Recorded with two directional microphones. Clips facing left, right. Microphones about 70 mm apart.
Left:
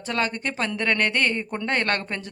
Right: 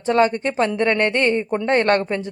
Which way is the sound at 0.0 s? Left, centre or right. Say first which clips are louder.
Right 9 dB; right.